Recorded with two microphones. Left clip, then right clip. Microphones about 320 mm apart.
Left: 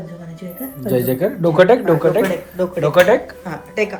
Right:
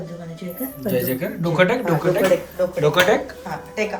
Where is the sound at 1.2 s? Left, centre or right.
Centre.